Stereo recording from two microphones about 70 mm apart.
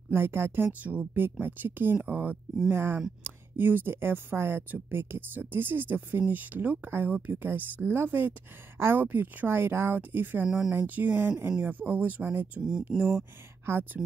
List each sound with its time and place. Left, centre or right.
0.1 s speech: right
2.7 s speech: right
12.9 s speech: centre
13.7 s speech: right